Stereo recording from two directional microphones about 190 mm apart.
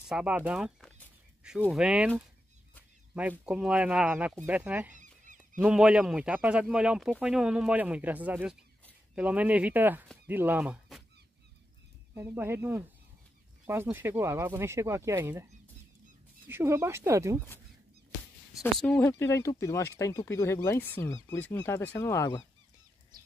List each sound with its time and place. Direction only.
0.1 s speech: 5° right (ahead or behind)
4.9 s goose: 40° right (ahead or behind)
5.6 s speech: 5° right (ahead or behind)
12.1 s speech: 10° right (ahead or behind)
16.4 s speech: 15° right (ahead or behind)
18.6 s speech: 5° left (ahead or behind)